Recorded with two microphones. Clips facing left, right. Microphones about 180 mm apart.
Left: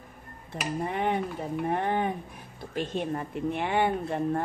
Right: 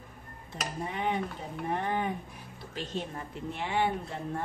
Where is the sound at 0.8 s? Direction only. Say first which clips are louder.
Left 3 dB; 55° left (ahead or behind).